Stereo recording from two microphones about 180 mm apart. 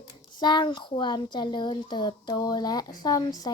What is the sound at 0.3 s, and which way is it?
Speech, 25° left (ahead or behind).